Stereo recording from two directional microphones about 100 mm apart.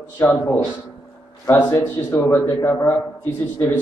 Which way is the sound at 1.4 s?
20° left (ahead or behind).